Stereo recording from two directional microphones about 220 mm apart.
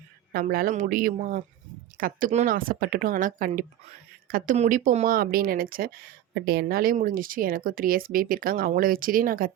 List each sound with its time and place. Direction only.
0.3 s speech: 40° right (ahead or behind)